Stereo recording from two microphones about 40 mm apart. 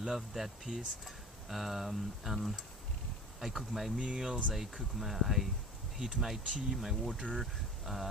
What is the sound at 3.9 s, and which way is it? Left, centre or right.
Speech, right.